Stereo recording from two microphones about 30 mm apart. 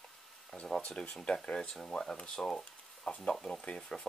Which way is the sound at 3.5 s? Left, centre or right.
Left.